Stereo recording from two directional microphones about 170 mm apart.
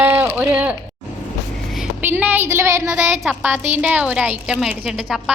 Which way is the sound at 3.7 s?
10° right (ahead or behind).